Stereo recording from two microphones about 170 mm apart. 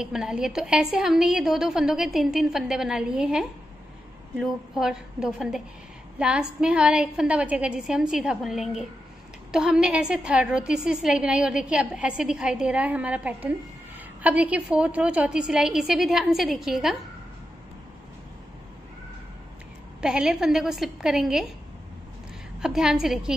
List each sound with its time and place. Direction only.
0.0 s a woman's voice: 5° right (ahead or behind)
20.0 s a woman's voice: 5° right (ahead or behind)
22.6 s a woman's voice: 5° right (ahead or behind)